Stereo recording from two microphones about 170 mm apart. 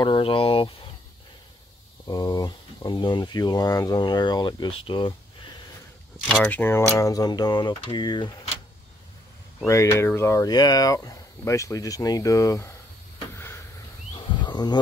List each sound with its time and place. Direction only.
0.0 s speech: 30° left (ahead or behind)
2.0 s speech: 20° left (ahead or behind)
6.1 s speech: centre (ahead or behind); by 8.3 s 25° left (ahead or behind)
9.7 s speech: 15° left (ahead or behind)
14.1 s a sound: 25° left (ahead or behind)